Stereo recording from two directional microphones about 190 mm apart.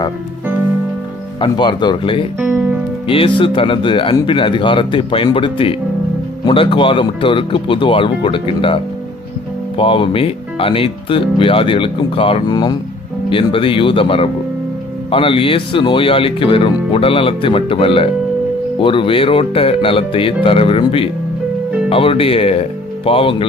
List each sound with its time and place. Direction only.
1.4 s speech: 25° left (ahead or behind)
2.4 s music: 10° right (ahead or behind)
3.1 s speech: 25° left (ahead or behind)